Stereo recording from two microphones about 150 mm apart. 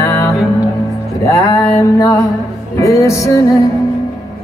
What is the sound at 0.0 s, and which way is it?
Music, 20° left (ahead or behind).